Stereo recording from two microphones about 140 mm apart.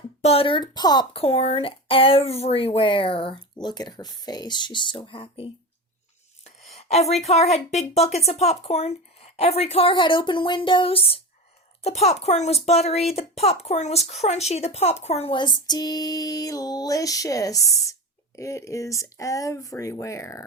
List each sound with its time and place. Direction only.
0.2 s speech: 45° left (ahead or behind); by 1.0 s 30° left (ahead or behind)
1.1 s speech: 45° left (ahead or behind)
6.4 s a sound: 45° left (ahead or behind)
7.5 s speech: 50° left (ahead or behind); by 20.4 s 20° left (ahead or behind)